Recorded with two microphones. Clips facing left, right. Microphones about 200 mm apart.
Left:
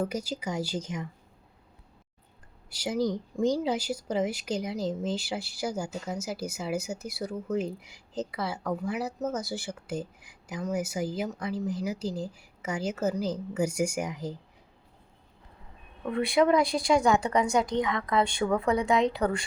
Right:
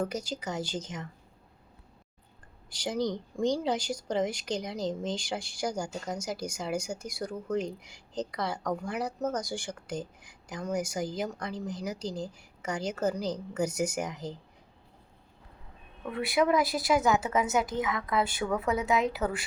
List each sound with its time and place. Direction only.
0.0 s speech: 10° left (ahead or behind)
2.6 s speech: 10° left (ahead or behind)
16.1 s a woman's voice: 5° right (ahead or behind)